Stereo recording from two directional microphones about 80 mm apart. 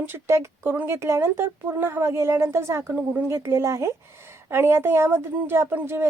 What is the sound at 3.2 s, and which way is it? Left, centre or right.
A woman's voice, right.